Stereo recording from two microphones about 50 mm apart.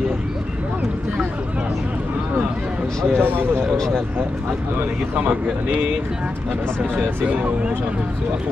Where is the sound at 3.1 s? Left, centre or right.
Right.